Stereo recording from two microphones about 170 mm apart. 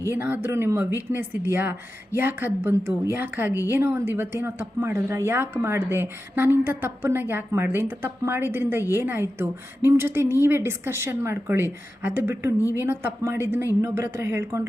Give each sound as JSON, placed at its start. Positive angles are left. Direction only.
{"t": 0.2, "sound": "speech", "side_deg": -10}
{"t": 12.5, "sound": "speech", "side_deg": 20}
{"t": 12.8, "sound": "speech", "side_deg": -15}